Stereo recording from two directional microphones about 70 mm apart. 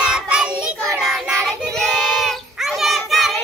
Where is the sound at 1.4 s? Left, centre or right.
Centre.